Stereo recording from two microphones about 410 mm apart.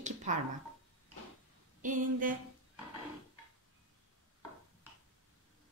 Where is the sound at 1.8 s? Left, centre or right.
Centre.